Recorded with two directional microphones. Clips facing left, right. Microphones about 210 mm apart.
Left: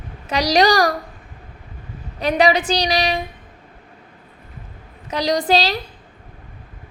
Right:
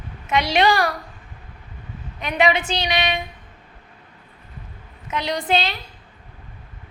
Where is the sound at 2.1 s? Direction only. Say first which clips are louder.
Left 4 dB; 35° left (ahead or behind).